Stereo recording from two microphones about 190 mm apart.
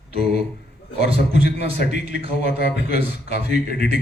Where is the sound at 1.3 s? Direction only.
65° left (ahead or behind).